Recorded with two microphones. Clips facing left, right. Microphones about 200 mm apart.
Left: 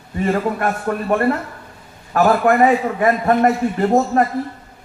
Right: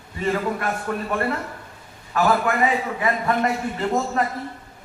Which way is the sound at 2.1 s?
50° left (ahead or behind).